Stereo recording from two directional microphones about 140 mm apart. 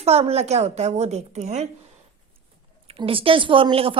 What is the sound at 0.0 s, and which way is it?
A woman's voice, 45° right (ahead or behind).